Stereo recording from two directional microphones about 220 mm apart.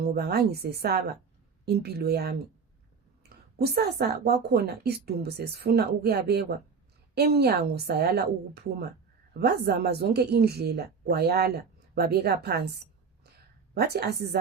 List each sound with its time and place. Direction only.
0.0 s a woman's voice: 45° right (ahead or behind)
3.6 s a woman's voice: 45° right (ahead or behind)
9.4 s a woman's voice: 45° right (ahead or behind)
13.7 s a woman's voice: 45° right (ahead or behind)